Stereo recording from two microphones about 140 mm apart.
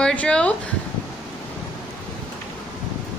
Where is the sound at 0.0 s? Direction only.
10° left (ahead or behind).